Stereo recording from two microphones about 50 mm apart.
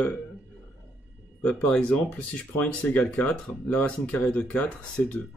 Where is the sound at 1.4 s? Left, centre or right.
Left.